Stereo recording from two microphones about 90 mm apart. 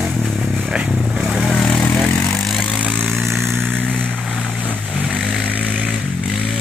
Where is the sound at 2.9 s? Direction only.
5° left (ahead or behind).